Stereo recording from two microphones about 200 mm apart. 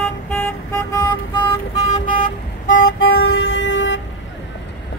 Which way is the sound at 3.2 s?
70° left (ahead or behind).